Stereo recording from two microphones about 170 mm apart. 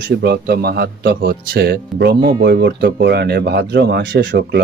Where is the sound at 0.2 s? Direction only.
70° right (ahead or behind).